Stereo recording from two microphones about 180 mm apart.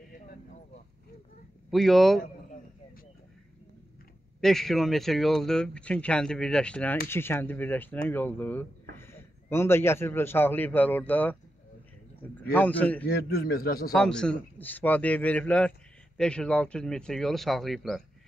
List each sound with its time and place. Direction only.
1.7 s a man's voice: centre (ahead or behind)
4.4 s a man's voice: centre (ahead or behind)
12.4 s a man's voice: 10° left (ahead or behind)
13.0 s a man's voice: 55° left (ahead or behind)
13.9 s a man's voice: 5° left (ahead or behind)